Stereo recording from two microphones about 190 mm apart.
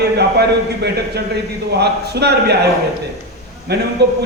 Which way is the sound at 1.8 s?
60° right (ahead or behind).